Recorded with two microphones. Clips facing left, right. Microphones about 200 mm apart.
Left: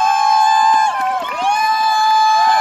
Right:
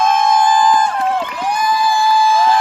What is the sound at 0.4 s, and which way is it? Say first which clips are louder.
Crowd: right 1 dB; 25° left (ahead or behind).